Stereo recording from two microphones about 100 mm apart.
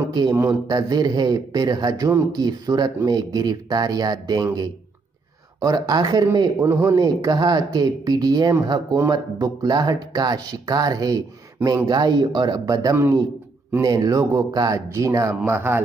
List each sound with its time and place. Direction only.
0.1 s a man's voice: 45° right (ahead or behind)
5.6 s speech: 40° right (ahead or behind)
6.6 s speech: 25° right (ahead or behind)
12.9 s a man's voice: 25° right (ahead or behind)